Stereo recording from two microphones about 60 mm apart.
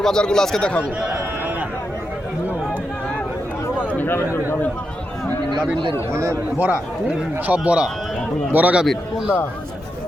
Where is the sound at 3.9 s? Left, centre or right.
Left.